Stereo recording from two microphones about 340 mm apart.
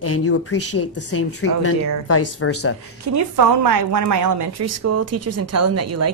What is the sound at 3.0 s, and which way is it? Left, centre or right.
A woman's voice, right.